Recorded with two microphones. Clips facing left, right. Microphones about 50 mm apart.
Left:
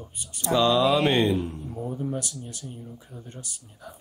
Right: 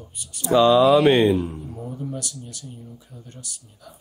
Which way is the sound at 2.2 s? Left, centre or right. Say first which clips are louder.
Even; left.